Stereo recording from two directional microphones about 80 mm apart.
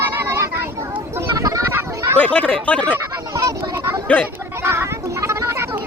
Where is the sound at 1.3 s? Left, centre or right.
Right.